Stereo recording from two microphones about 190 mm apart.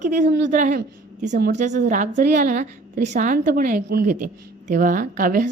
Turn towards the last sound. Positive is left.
turn(degrees=-45)  # may be behind; listen again after turning